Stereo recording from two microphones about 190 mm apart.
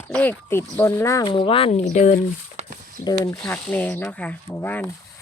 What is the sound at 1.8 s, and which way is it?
Speech, 40° left (ahead or behind).